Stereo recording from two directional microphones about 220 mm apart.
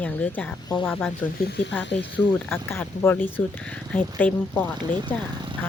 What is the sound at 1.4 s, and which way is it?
Speech, 50° left (ahead or behind).